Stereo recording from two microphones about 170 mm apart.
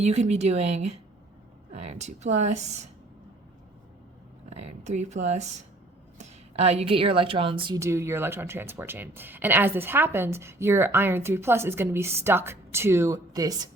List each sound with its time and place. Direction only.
0.0 s a woman's voice: 40° right (ahead or behind)
4.4 s speech: 40° right (ahead or behind)
7.8 s speech: 15° right (ahead or behind)